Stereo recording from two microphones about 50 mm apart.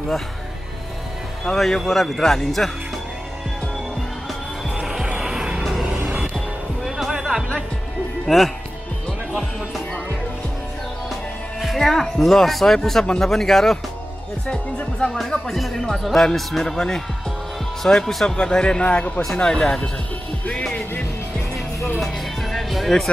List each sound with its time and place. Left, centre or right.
1.4 s speech: centre
4.6 s music: centre
6.3 s music: centre
8.3 s speech: centre
11.6 s speech: centre
14.5 s speech: left
15.4 s speech: centre; by 19.2 s left
19.3 s speech: centre
22.0 s music: centre